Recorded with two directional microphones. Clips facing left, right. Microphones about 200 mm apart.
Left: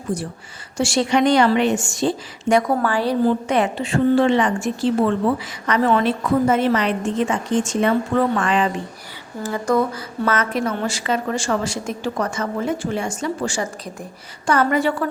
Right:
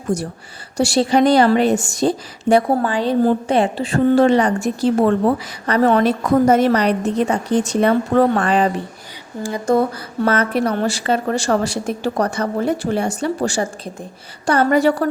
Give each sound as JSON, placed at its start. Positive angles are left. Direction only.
{"t": 0.1, "sound": "a woman's voice", "side_deg": -45}
{"t": 2.8, "sound": "a woman's voice", "side_deg": -20}
{"t": 3.5, "sound": "a woman's voice", "side_deg": -35}
{"t": 9.4, "sound": "speech", "side_deg": -20}
{"t": 9.7, "sound": "a woman's voice", "side_deg": -30}
{"t": 11.6, "sound": "a woman's voice", "side_deg": -65}
{"t": 13.2, "sound": "a woman's voice", "side_deg": -35}